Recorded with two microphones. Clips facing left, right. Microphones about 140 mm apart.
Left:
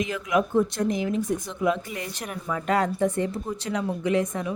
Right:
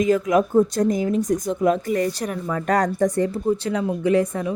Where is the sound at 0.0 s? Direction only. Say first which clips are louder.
Right 7 dB; 40° right (ahead or behind).